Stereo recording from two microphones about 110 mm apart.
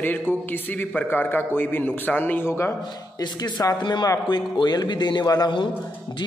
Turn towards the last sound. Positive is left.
turn(degrees=35)  # may be behind; listen again after turning